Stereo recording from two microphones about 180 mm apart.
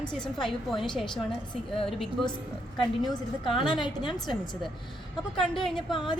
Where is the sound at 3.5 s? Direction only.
25° left (ahead or behind).